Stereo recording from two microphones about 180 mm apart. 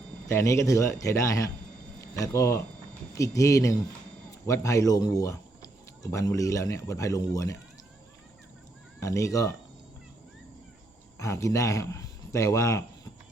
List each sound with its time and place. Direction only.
0.3 s a man's voice: 15° left (ahead or behind)
9.0 s a man's voice: 15° left (ahead or behind)
11.2 s speech: 15° left (ahead or behind)